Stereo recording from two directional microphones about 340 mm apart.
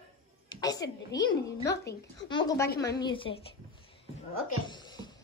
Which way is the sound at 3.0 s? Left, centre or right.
Centre.